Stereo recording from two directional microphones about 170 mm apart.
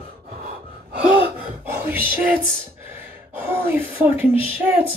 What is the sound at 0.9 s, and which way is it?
Gasp, 10° right (ahead or behind).